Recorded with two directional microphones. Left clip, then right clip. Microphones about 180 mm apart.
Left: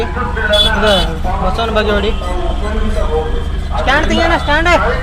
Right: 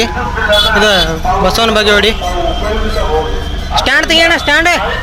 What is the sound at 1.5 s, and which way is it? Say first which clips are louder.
Speech: right 4 dB; 15° right (ahead or behind).